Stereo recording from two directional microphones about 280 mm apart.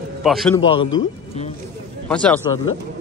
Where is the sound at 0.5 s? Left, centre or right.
Centre.